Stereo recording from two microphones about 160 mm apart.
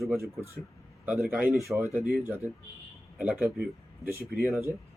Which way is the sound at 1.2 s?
5° right (ahead or behind).